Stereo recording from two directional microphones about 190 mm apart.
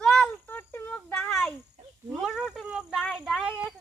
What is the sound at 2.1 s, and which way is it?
Speech, centre (ahead or behind).